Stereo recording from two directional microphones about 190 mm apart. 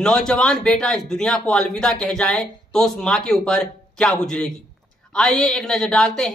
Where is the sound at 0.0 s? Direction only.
5° left (ahead or behind).